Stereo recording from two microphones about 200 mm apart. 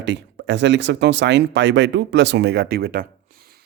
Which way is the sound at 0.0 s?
60° right (ahead or behind).